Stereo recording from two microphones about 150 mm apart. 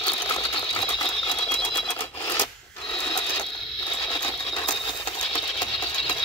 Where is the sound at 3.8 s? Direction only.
35° left (ahead or behind).